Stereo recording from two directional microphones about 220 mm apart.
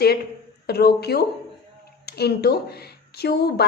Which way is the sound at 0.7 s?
45° left (ahead or behind).